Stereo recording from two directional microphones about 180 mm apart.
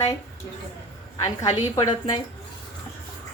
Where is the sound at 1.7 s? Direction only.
25° left (ahead or behind).